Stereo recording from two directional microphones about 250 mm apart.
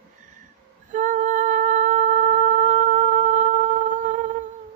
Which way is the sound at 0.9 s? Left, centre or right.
Right.